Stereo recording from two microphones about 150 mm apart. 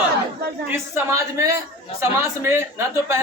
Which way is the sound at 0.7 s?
15° right (ahead or behind).